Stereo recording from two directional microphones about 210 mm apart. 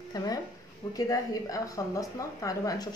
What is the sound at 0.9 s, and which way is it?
A woman's voice, 15° left (ahead or behind).